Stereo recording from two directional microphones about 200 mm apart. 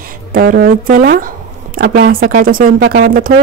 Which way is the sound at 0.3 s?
45° right (ahead or behind).